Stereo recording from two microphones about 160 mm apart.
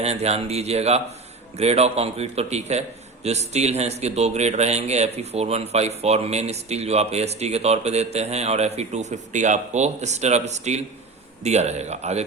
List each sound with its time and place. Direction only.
0.0 s a man's voice: 40° right (ahead or behind)